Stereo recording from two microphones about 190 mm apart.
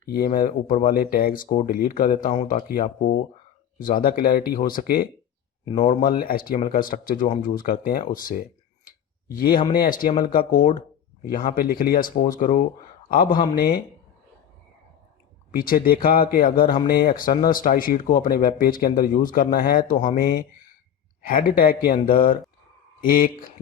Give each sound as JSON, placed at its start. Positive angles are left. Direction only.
{"t": 0.1, "sound": "speech", "side_deg": 50}
{"t": 15.5, "sound": "speech", "side_deg": 50}